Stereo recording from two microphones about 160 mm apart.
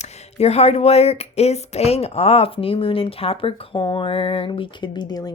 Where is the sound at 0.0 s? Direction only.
40° left (ahead or behind).